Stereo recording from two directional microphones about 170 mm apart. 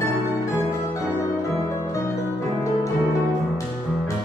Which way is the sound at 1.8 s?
20° left (ahead or behind).